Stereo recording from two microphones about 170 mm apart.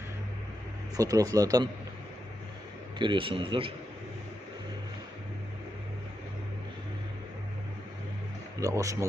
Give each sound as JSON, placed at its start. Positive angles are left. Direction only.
{"t": 0.9, "sound": "speech", "side_deg": -20}
{"t": 3.0, "sound": "a man's voice", "side_deg": -30}
{"t": 8.6, "sound": "speech", "side_deg": -20}